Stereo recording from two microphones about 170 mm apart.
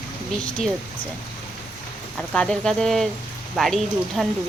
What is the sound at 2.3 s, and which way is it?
Speech, 5° left (ahead or behind).